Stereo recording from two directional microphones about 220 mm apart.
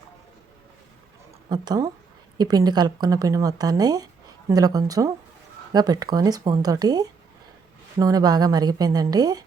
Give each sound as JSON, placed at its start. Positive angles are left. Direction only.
{"t": 1.5, "sound": "speech", "side_deg": -15}